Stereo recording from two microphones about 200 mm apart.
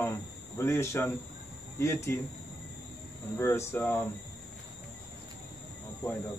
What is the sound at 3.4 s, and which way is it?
Speech, 15° left (ahead or behind).